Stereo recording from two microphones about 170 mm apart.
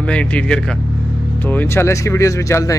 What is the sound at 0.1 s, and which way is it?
Speech, 5° left (ahead or behind).